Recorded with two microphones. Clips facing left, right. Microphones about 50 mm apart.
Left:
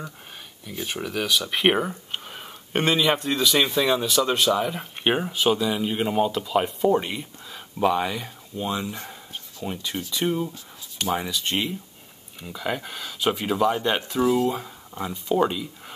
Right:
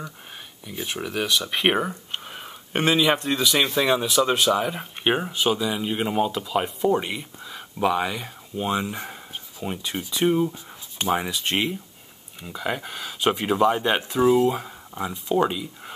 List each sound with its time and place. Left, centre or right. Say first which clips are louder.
0.8 s speech: even; centre
8.5 s speech: right 3 dB; right
12.4 s speech: even; centre
14.5 s speech: right 1 dB; centre